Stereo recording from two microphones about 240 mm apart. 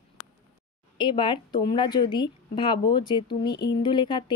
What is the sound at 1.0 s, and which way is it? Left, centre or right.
Speech, centre.